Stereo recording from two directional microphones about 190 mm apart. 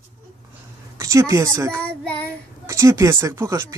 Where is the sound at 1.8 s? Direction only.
5° left (ahead or behind).